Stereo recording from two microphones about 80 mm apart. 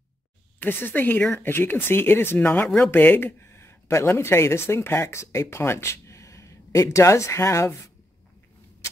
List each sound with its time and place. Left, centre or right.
0.6 s speech: left